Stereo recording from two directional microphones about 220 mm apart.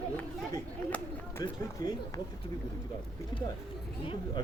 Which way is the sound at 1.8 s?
15° left (ahead or behind).